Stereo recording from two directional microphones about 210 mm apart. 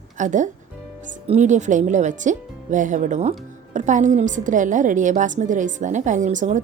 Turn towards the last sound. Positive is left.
turn(degrees=-35)  # may be behind; listen again after turning